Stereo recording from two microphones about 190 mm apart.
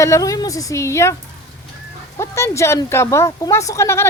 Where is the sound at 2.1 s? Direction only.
15° left (ahead or behind).